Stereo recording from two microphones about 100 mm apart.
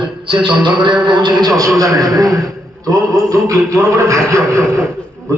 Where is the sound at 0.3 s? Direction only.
50° right (ahead or behind).